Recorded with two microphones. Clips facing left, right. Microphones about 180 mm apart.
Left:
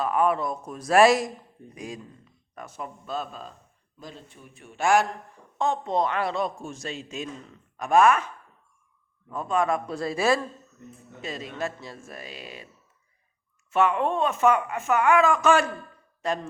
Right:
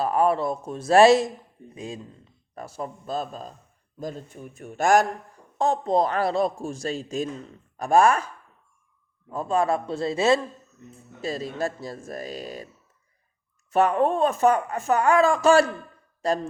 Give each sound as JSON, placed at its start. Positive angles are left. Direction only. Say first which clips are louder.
{"t": 0.0, "sound": "a man's voice", "louder": "right 2 dB", "side_deg": -35}
{"t": 9.3, "sound": "a man's voice", "louder": "right 2 dB", "side_deg": -35}
{"t": 11.2, "sound": "speech", "louder": "right 4 dB", "side_deg": -35}
{"t": 13.7, "sound": "speech", "louder": "right 3 dB", "side_deg": -40}